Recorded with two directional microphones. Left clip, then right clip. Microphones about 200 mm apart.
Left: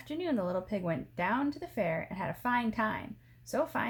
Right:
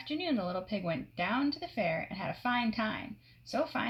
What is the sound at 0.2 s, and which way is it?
Speech, 30° left (ahead or behind).